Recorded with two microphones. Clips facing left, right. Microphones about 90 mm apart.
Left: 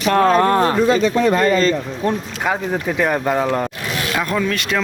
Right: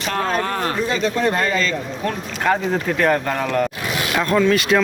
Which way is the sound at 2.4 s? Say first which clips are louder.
Right 1 dB; 10° left (ahead or behind).